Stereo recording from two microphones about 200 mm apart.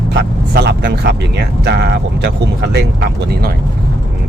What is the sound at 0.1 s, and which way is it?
Speech, 55° right (ahead or behind).